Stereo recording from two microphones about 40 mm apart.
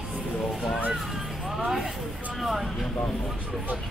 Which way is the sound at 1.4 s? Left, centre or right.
Centre.